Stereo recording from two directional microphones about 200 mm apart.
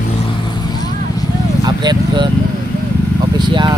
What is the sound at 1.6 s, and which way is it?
Speech, 20° right (ahead or behind).